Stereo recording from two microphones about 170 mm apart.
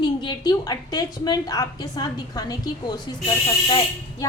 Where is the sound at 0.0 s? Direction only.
25° left (ahead or behind).